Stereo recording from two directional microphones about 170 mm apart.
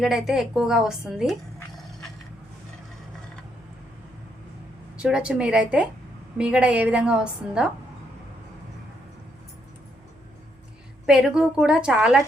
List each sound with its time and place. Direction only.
0.0 s a woman's voice: centre (ahead or behind)
5.0 s a woman's voice: 5° right (ahead or behind)
11.0 s a woman's voice: 5° right (ahead or behind)